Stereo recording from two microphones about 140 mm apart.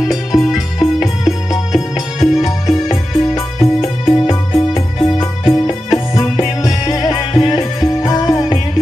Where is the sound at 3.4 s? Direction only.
45° left (ahead or behind).